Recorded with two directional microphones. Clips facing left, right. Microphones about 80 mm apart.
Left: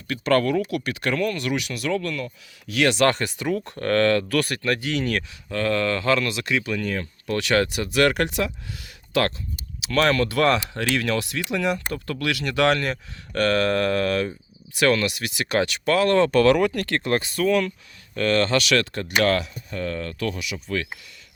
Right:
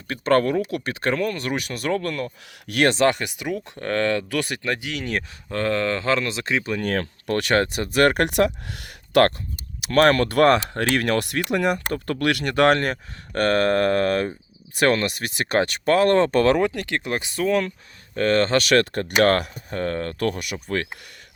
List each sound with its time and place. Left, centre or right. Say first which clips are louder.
0.1 s speech: right 1 dB; right
3.1 s speech: left 1 dB; centre
5.5 s speech: even; right
6.8 s speech: right 3 dB; right
7.3 s speech: right 1 dB; right
8.3 s speech: right 6 dB; right
9.8 s speech: right 4 dB; right
16.8 s speech: left 3 dB; centre
18.1 s speech: right 2 dB; right